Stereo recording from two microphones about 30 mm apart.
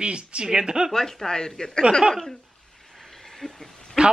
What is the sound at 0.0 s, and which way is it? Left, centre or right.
Speech, right.